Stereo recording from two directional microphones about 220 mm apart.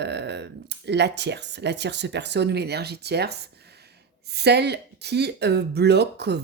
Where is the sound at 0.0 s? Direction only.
50° right (ahead or behind).